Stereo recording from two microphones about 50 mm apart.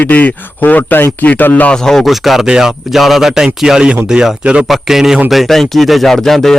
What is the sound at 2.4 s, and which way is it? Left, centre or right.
Speech, centre.